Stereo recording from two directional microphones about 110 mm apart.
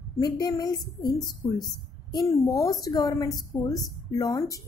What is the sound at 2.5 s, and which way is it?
Speech, 35° left (ahead or behind).